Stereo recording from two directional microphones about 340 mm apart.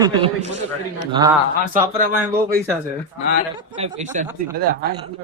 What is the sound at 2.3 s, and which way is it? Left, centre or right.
Speech, right.